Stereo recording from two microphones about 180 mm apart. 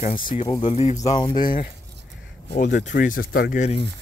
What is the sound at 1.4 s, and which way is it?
Speech, 50° left (ahead or behind).